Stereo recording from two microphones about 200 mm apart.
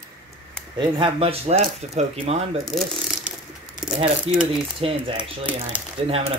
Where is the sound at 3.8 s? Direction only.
5° right (ahead or behind).